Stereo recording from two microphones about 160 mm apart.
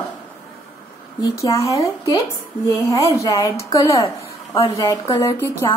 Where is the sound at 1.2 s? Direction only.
20° left (ahead or behind).